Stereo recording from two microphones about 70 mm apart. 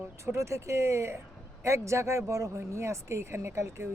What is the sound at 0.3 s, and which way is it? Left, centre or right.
Speech, right.